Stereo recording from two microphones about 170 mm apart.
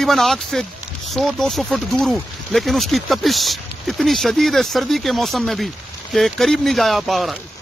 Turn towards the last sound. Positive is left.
turn(degrees=0)  # may be behind; listen again after turning